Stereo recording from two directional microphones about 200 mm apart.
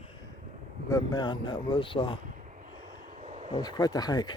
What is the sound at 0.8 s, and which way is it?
Speech, 20° left (ahead or behind).